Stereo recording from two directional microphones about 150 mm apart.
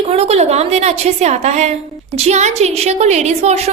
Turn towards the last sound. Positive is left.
turn(degrees=-45)  # may be behind; listen again after turning